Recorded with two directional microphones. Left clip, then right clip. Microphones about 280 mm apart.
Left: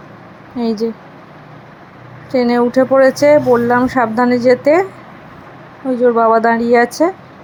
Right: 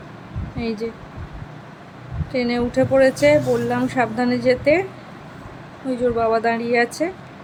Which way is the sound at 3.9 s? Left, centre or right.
Centre.